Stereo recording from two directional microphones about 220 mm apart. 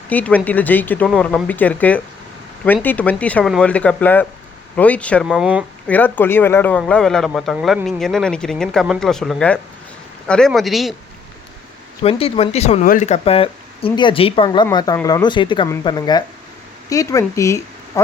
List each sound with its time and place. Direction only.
0.1 s speech: 5° left (ahead or behind)
5.9 s speech: 10° left (ahead or behind)
12.0 s speech: 25° left (ahead or behind)